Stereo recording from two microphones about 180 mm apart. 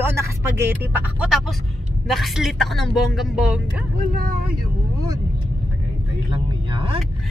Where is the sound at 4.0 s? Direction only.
50° right (ahead or behind).